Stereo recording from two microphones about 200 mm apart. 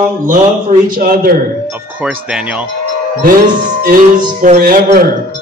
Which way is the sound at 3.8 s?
45° right (ahead or behind).